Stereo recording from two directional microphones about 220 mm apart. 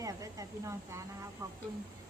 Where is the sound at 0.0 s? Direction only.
15° right (ahead or behind).